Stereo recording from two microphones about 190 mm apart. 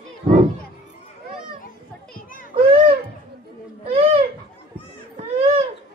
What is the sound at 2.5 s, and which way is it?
Children playing, 30° right (ahead or behind).